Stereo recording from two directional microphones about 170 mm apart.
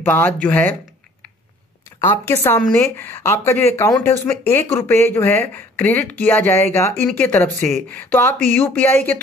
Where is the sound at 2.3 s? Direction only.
15° left (ahead or behind).